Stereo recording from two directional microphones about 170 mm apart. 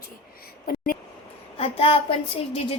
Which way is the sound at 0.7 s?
55° left (ahead or behind).